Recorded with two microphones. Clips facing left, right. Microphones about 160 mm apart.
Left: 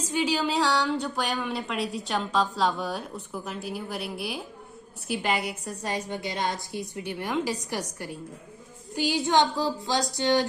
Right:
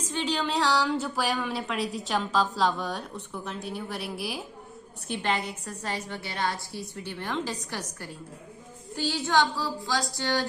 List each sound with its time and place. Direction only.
0.1 s a woman's voice: 10° left (ahead or behind)
9.0 s child singing: 15° left (ahead or behind)